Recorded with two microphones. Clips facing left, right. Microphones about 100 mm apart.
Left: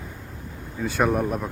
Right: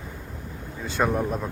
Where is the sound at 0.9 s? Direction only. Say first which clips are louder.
Left 2 dB; 15° left (ahead or behind).